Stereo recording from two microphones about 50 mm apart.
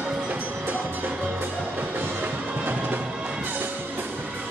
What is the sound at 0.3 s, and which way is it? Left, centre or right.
Music, right.